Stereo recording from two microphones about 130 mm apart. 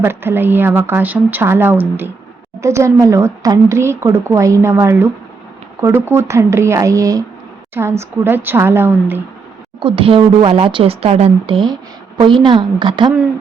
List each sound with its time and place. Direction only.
0.0 s speech: 15° right (ahead or behind)
9.8 s a woman's voice: 45° right (ahead or behind)